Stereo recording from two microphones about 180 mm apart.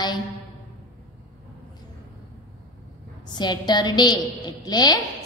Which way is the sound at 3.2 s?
25° left (ahead or behind).